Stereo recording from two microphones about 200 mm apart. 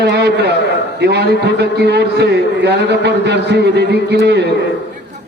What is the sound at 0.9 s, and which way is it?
A man's voice, 55° right (ahead or behind).